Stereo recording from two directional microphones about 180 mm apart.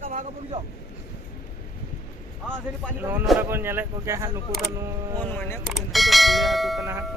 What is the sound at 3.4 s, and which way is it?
Speech, 10° right (ahead or behind).